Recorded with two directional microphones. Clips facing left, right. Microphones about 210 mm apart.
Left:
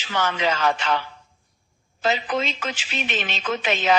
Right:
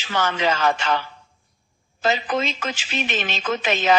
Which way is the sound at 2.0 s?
45° right (ahead or behind).